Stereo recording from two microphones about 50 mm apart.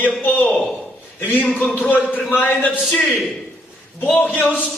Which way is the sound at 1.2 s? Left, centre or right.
Left.